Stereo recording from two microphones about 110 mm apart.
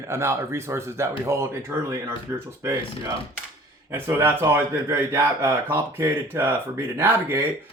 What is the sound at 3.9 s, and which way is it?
Speech, 20° right (ahead or behind).